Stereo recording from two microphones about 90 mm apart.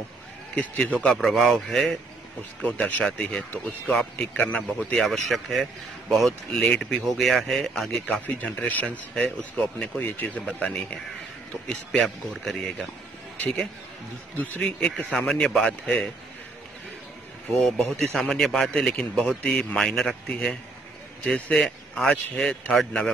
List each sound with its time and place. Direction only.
0.6 s speech: 15° left (ahead or behind)
4.6 s speech: centre (ahead or behind)
8.4 s speech: 15° left (ahead or behind)
14.3 s speech: 20° left (ahead or behind)
15.0 s speech: 10° left (ahead or behind)
17.6 s speech: 5° left (ahead or behind)